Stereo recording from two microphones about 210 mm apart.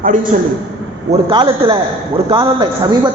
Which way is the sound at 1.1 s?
25° right (ahead or behind).